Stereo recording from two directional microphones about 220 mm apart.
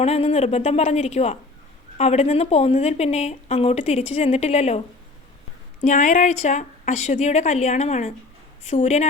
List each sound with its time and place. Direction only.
0.0 s speech: 30° left (ahead or behind)
5.8 s a woman's voice: 35° left (ahead or behind)